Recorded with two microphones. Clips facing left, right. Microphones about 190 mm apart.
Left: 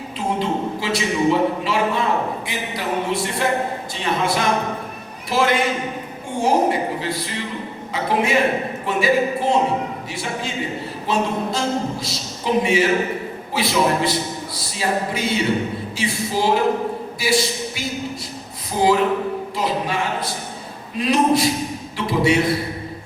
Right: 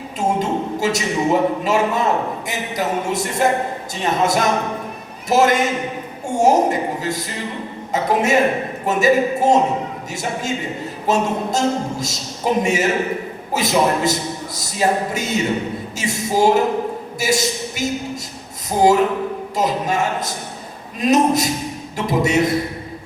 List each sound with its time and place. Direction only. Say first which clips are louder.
0.2 s a woman's voice: right 2 dB; 45° right (ahead or behind)
11.0 s speech: right 3 dB; 45° right (ahead or behind)